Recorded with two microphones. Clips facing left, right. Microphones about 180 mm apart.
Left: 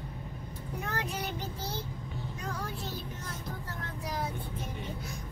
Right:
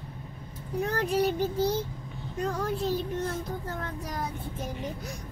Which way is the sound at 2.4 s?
55° right (ahead or behind).